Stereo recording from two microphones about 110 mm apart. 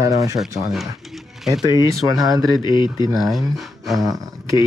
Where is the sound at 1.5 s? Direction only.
35° right (ahead or behind).